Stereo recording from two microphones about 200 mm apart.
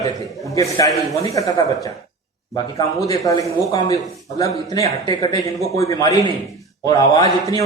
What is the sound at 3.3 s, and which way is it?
A man's voice, 15° left (ahead or behind).